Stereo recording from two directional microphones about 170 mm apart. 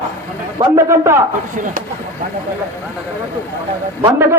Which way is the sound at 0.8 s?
15° right (ahead or behind).